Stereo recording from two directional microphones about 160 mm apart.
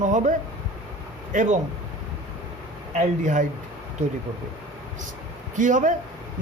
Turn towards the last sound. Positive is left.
turn(degrees=-50)  # may be behind; listen again after turning